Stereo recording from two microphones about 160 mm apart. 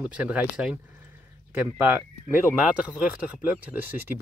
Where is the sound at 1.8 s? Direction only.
10° right (ahead or behind).